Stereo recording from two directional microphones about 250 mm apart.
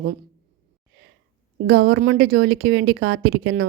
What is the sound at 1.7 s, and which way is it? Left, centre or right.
A woman's voice, right.